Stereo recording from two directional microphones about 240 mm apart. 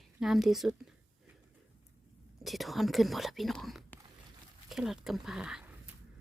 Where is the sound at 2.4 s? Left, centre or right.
Centre.